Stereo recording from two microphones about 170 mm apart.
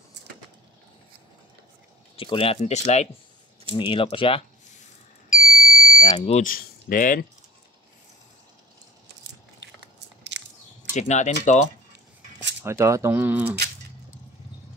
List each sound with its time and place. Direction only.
2.1 s speech: 30° left (ahead or behind)
3.7 s speech: 30° left (ahead or behind)
5.3 s smoke detector: 50° left (ahead or behind)
6.4 s speech: 55° left (ahead or behind)
10.3 s chewing: 90° right
10.9 s speech: 45° left (ahead or behind)
12.6 s speech: 15° right (ahead or behind)